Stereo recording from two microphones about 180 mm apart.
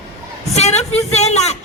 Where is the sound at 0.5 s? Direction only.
40° left (ahead or behind).